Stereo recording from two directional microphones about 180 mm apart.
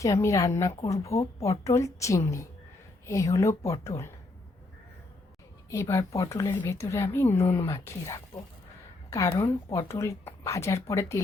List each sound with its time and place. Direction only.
0.0 s speech: 15° left (ahead or behind)
5.7 s speech: 15° left (ahead or behind)
9.0 s a sound: 15° left (ahead or behind)
9.4 s speech: 15° left (ahead or behind)